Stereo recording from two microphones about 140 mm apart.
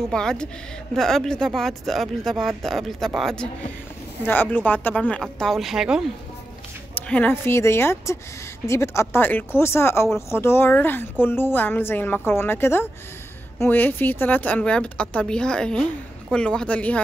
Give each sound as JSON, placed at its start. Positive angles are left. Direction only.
{"t": 0.1, "sound": "speech", "side_deg": 5}
{"t": 4.3, "sound": "a woman's voice", "side_deg": 15}
{"t": 7.0, "sound": "a woman's voice", "side_deg": 10}